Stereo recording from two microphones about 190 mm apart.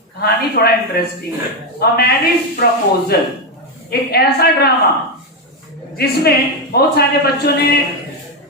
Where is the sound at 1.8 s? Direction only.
55° left (ahead or behind).